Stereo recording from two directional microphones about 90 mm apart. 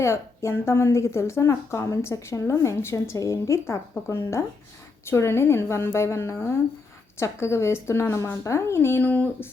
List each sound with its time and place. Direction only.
0.0 s a woman's voice: 30° left (ahead or behind)